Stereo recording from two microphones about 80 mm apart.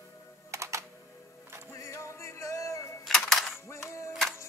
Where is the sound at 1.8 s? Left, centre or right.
Left.